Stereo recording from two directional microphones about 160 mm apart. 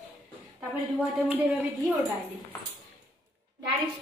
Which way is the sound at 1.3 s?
10° right (ahead or behind).